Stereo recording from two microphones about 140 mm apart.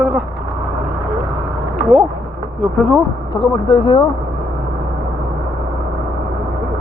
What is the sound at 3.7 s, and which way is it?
Speech, 35° left (ahead or behind).